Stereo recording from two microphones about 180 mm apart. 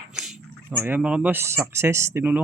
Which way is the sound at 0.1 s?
Centre (ahead or behind).